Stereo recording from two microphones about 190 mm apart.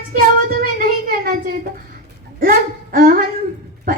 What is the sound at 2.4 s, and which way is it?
Speech, 50° right (ahead or behind).